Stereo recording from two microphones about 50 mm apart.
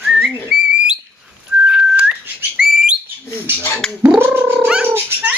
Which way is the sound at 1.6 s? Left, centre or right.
Centre.